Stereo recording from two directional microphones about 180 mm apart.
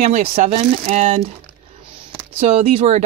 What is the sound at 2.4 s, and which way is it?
Speech, 45° right (ahead or behind).